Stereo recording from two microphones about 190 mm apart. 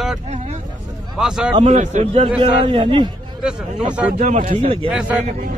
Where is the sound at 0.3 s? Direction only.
35° right (ahead or behind).